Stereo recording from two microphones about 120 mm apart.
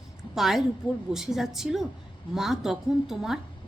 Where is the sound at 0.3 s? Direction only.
Centre (ahead or behind).